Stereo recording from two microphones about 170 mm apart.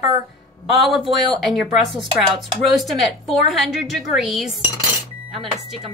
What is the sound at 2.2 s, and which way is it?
A woman's voice, centre (ahead or behind).